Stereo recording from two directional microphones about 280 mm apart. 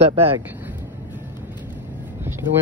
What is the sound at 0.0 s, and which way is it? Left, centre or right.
Speech, centre.